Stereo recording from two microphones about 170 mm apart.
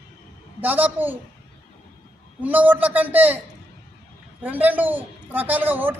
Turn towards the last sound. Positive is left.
turn(degrees=-10)  # may be behind; listen again after turning